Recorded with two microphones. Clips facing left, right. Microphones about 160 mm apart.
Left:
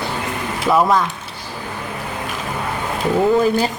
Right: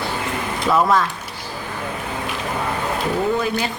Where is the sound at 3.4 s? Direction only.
40° left (ahead or behind).